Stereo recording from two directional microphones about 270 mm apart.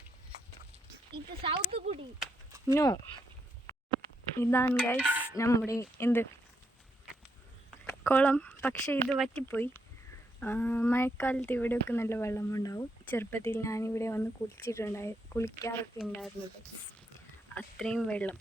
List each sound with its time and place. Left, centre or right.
1.4 s speech: right
2.1 s a sound: centre
2.7 s speech: centre
4.4 s speech: centre
4.9 s dishes: centre
5.4 s speech: centre
7.9 s speech: centre
17.5 s speech: centre